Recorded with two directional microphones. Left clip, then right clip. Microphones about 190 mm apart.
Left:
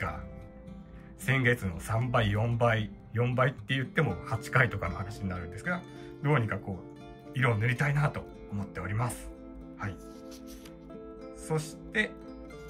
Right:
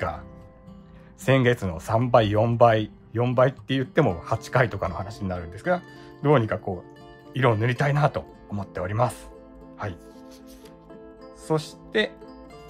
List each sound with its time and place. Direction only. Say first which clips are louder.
1.2 s speech: right 7 dB; 15° right (ahead or behind)
11.4 s speech: right 8 dB; 20° right (ahead or behind)